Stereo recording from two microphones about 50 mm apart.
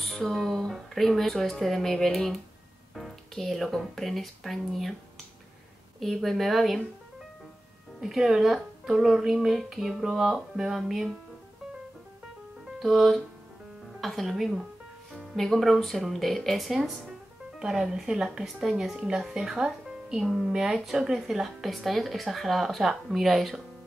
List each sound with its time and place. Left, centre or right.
0.0 s music: centre
0.7 s a woman's voice: centre
5.9 s a woman's voice: centre
8.0 s a woman's voice: centre
12.7 s a woman's voice: centre
17.6 s a woman's voice: centre
19.5 s music: centre
20.2 s a woman's voice: centre